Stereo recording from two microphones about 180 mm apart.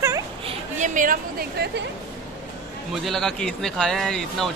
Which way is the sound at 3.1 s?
Centre (ahead or behind).